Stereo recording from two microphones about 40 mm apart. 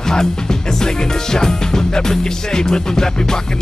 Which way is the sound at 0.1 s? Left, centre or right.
Centre.